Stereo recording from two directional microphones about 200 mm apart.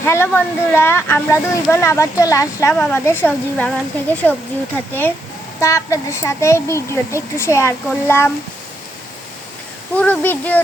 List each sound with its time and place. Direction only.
0.0 s speech: 10° left (ahead or behind)
5.5 s speech: 15° left (ahead or behind)
10.0 s speech: 10° left (ahead or behind)